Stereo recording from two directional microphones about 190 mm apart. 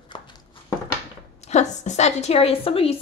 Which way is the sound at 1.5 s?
35° left (ahead or behind).